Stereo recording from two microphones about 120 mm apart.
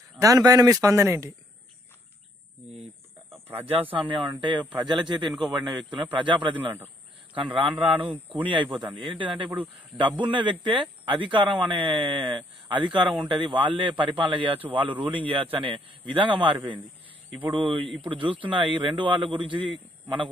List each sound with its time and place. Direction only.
0.2 s speech: 30° right (ahead or behind)
3.3 s a sound: 20° right (ahead or behind)
3.9 s speech: 40° right (ahead or behind)